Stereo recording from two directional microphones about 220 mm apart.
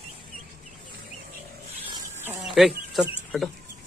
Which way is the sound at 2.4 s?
Centre (ahead or behind).